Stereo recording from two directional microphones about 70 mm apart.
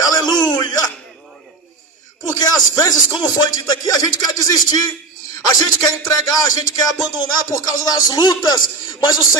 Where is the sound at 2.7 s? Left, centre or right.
Left.